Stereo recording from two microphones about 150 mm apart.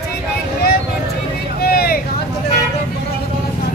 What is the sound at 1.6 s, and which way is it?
Vehicle, 90° left.